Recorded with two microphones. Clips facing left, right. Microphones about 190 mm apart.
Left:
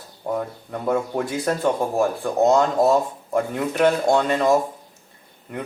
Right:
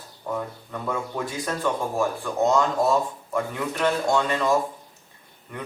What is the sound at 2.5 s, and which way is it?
Speech, 45° left (ahead or behind).